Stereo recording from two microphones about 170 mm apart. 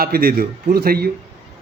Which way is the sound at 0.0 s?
60° right (ahead or behind).